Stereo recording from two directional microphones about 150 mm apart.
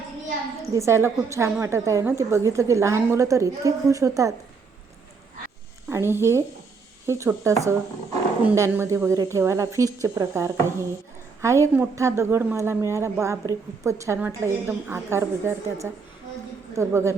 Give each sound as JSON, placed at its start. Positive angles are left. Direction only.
{"t": 0.6, "sound": "a woman's voice", "side_deg": -20}
{"t": 5.9, "sound": "a woman's voice", "side_deg": -15}
{"t": 8.5, "sound": "a woman's voice", "side_deg": -20}